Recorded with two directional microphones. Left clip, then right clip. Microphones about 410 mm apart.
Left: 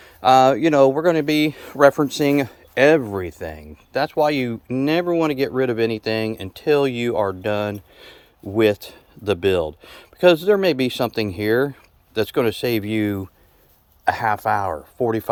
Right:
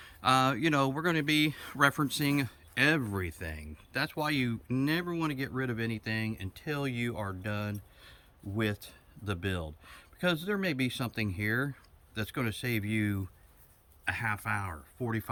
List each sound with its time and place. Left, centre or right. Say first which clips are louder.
0.0 s speech: left 14 dB; centre
5.4 s speech: left 16 dB; left
12.8 s speech: left 11 dB; centre